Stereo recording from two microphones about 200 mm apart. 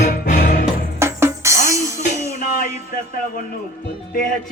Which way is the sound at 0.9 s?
15° right (ahead or behind).